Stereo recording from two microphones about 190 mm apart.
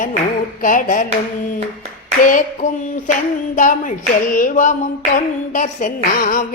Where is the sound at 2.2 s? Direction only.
45° left (ahead or behind).